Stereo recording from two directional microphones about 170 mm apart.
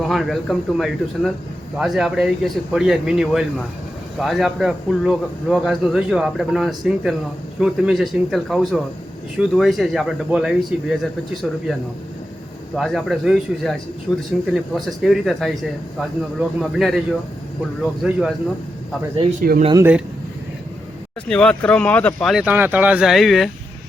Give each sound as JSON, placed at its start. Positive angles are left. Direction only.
{"t": 0.0, "sound": "speech", "side_deg": 0}
{"t": 12.7, "sound": "speech", "side_deg": 0}
{"t": 18.0, "sound": "speech", "side_deg": -5}
{"t": 19.4, "sound": "speech", "side_deg": -55}
{"t": 19.7, "sound": "speech", "side_deg": -10}
{"t": 21.2, "sound": "speech", "side_deg": 5}